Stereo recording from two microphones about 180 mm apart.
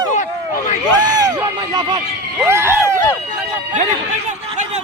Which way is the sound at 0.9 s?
20° right (ahead or behind).